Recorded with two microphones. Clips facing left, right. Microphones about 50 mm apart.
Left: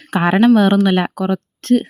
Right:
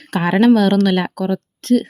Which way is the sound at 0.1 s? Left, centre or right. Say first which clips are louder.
Left 1 dB; left.